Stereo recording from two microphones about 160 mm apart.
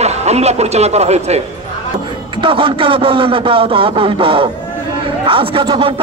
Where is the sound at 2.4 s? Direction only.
35° right (ahead or behind).